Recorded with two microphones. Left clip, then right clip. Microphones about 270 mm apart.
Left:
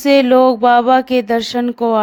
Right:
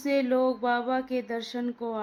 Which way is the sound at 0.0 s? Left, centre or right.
Left.